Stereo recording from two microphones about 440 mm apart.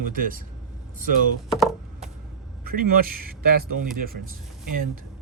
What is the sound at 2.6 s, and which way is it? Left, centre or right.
Speech, centre.